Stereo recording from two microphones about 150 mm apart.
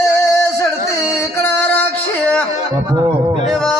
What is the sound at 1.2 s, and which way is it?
Music, 15° left (ahead or behind).